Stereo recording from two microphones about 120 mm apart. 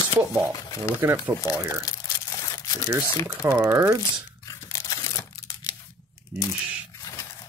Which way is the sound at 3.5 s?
25° right (ahead or behind).